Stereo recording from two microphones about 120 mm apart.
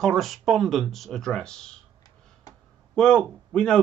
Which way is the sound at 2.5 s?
30° left (ahead or behind).